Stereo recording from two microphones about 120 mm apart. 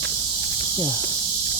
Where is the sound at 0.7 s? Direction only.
40° left (ahead or behind).